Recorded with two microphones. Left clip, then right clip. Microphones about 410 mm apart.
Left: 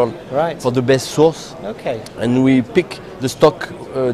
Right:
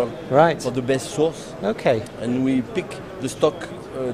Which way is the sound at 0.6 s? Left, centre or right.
Left.